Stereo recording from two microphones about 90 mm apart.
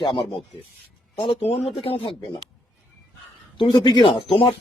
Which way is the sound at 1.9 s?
90° left.